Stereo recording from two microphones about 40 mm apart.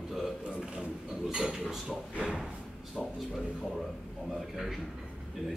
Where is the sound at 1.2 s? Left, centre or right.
Centre.